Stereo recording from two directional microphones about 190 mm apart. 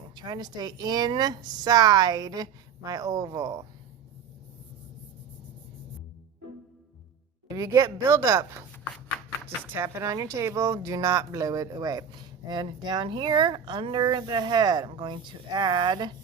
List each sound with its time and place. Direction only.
0.2 s speech: 20° right (ahead or behind)
7.4 s a woman's voice: 20° right (ahead or behind)
8.7 s chopping: 5° left (ahead or behind)
9.7 s a woman's voice: 15° right (ahead or behind)